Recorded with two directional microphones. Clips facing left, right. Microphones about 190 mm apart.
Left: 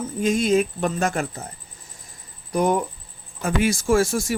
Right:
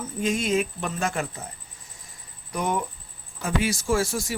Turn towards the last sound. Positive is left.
turn(degrees=50)  # may be behind; listen again after turning